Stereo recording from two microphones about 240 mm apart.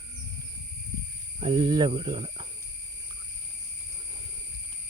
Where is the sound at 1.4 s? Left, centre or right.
Right.